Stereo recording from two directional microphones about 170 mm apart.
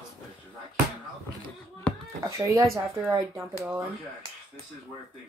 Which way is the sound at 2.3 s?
20° right (ahead or behind).